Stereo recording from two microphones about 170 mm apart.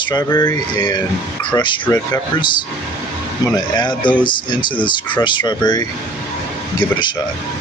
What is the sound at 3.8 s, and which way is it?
Speech, 25° left (ahead or behind).